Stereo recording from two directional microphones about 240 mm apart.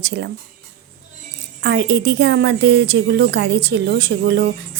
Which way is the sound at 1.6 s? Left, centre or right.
Right.